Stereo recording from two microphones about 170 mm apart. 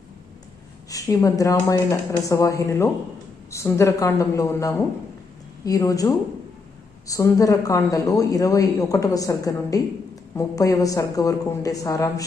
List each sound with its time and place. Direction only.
0.9 s a woman's voice: 20° left (ahead or behind)